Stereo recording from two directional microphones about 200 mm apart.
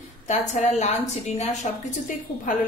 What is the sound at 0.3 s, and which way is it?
A woman's voice, 35° left (ahead or behind).